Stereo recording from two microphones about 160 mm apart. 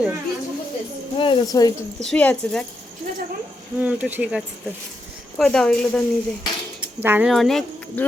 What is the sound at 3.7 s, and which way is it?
A woman's voice, 10° right (ahead or behind).